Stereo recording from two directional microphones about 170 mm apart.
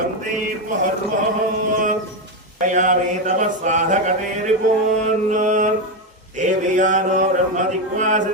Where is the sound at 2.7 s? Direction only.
45° right (ahead or behind).